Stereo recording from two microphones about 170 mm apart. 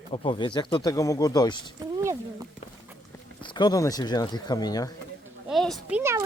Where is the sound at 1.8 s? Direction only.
20° right (ahead or behind).